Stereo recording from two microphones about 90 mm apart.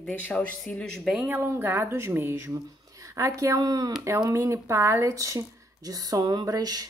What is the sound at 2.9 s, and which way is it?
Speech, 35° right (ahead or behind).